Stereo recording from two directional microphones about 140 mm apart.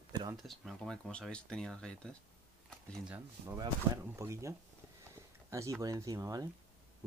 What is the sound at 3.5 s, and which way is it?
Speech, 20° right (ahead or behind).